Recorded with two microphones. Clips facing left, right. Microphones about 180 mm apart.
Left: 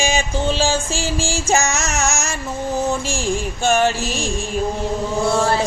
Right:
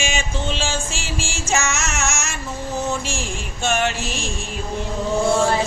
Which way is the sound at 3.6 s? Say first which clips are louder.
Left 4 dB; 35° left (ahead or behind).